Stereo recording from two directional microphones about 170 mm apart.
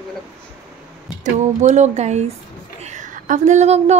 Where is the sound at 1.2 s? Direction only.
45° right (ahead or behind).